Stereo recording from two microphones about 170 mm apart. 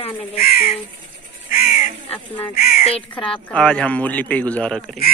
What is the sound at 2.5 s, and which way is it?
Speech, 60° left (ahead or behind).